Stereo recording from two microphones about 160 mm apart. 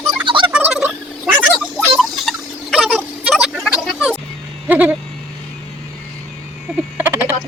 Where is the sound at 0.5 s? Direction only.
10° right (ahead or behind).